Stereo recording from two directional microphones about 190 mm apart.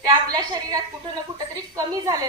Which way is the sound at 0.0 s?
20° right (ahead or behind).